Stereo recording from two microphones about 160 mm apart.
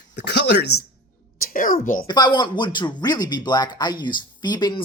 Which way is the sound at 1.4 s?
60° left (ahead or behind).